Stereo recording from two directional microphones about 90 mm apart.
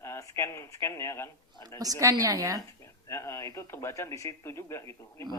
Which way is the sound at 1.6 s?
45° right (ahead or behind).